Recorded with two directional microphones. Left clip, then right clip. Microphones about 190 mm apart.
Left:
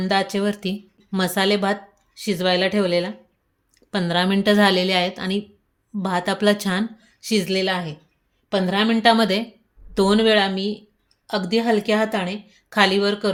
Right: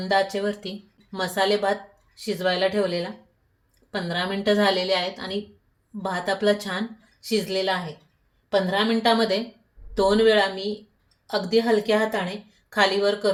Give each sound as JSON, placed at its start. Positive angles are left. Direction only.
{"t": 0.1, "sound": "speech", "side_deg": 65}